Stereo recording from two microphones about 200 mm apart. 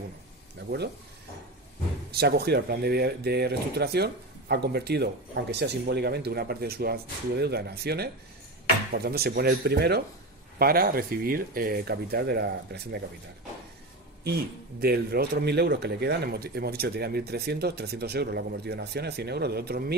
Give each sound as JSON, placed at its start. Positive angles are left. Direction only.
{"t": 2.0, "sound": "speech", "side_deg": -55}
{"t": 14.8, "sound": "speech", "side_deg": -50}